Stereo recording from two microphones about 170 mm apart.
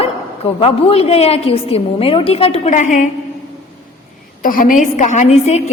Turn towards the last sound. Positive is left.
turn(degrees=45)  # may be behind; listen again after turning